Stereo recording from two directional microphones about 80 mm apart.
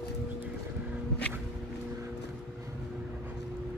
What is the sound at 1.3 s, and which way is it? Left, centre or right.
Walk, centre.